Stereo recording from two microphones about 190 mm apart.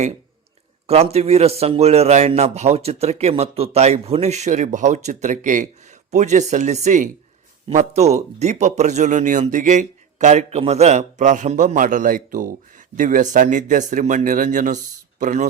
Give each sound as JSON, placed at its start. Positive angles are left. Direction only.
{"t": 0.9, "sound": "speech", "side_deg": -35}